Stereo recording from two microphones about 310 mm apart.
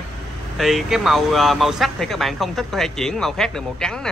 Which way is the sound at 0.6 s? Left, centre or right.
Centre.